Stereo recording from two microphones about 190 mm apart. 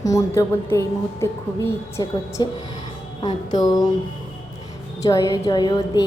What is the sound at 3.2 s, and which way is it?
Music, 20° left (ahead or behind).